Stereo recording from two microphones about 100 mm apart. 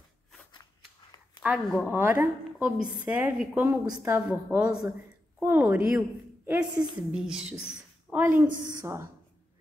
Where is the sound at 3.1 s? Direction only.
10° right (ahead or behind).